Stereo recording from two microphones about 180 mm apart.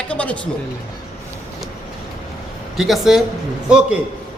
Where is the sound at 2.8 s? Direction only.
Centre (ahead or behind).